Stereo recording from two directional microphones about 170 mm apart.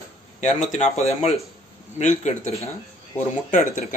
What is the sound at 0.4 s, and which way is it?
Speech, 45° left (ahead or behind).